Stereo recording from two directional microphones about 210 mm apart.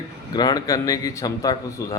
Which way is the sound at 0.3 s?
20° left (ahead or behind).